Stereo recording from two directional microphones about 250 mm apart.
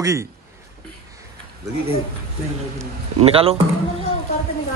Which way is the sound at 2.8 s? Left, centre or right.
Right.